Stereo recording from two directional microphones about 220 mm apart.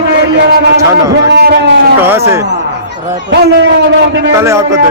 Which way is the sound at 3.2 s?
55° right (ahead or behind).